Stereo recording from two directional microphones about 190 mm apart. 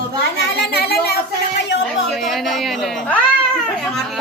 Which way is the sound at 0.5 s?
55° left (ahead or behind).